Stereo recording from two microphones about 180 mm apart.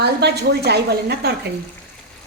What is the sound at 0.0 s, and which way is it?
A woman's voice, 65° right (ahead or behind).